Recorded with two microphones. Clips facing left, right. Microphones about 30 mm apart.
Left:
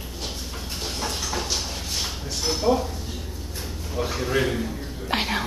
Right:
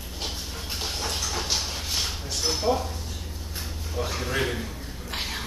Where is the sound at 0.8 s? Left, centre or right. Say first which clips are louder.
Left 1 dB; centre.